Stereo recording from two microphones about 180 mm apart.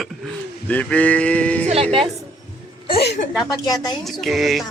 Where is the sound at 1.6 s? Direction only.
35° right (ahead or behind).